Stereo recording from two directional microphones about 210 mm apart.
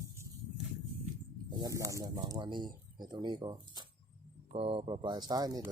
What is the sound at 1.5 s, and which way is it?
Speech, 15° right (ahead or behind).